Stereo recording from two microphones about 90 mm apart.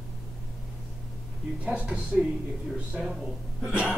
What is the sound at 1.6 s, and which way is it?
A man's voice, 15° right (ahead or behind).